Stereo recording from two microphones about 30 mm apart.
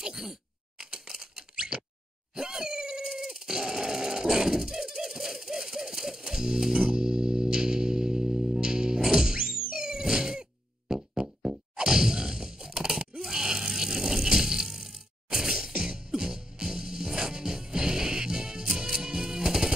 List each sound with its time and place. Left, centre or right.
0.0 s a sound: centre
2.3 s dog: right
6.7 s music: right
11.1 s a sound: right
13.3 s vehicle: right
15.3 s music: centre
18.7 s music: centre
18.9 s music: right